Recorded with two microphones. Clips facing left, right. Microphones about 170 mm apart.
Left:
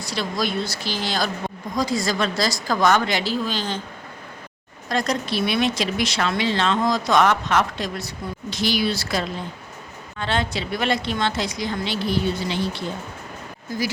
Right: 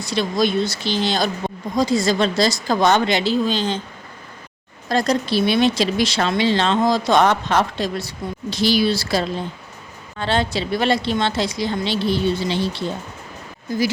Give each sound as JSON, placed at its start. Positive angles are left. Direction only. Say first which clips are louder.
{"t": 0.0, "sound": "speech", "louder": "right 6 dB", "side_deg": -20}
{"t": 4.9, "sound": "speech", "louder": "right 4 dB", "side_deg": -35}